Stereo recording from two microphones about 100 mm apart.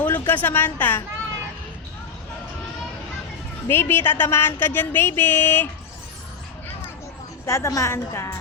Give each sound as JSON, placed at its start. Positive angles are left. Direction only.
{"t": 0.0, "sound": "a woman's voice", "side_deg": 15}
{"t": 3.7, "sound": "speech", "side_deg": 20}
{"t": 7.4, "sound": "speech", "side_deg": 30}